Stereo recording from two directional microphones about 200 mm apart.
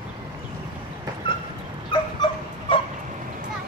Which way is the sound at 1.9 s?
25° left (ahead or behind).